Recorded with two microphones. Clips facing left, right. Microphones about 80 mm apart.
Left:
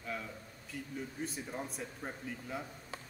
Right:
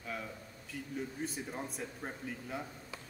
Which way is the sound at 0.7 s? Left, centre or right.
Centre.